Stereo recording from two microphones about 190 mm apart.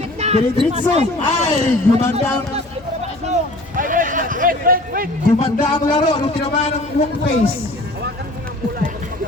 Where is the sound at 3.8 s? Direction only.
45° right (ahead or behind).